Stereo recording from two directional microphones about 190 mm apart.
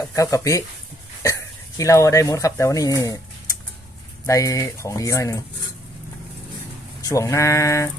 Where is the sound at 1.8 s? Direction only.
15° left (ahead or behind).